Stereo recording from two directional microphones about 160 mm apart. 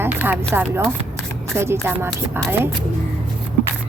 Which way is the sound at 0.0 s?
10° right (ahead or behind).